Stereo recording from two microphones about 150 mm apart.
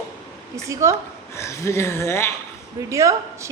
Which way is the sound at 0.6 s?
20° right (ahead or behind).